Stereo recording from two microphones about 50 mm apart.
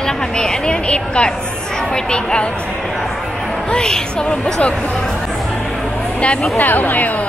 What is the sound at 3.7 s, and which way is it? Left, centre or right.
Speech, centre.